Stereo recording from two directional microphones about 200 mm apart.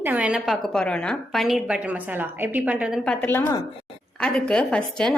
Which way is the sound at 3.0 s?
5° left (ahead or behind).